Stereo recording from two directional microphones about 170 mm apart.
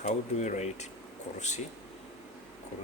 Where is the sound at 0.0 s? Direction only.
45° left (ahead or behind).